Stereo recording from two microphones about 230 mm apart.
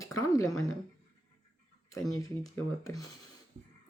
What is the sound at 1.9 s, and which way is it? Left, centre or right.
Speech, centre.